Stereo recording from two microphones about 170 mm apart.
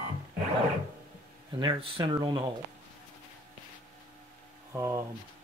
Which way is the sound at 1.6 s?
30° right (ahead or behind).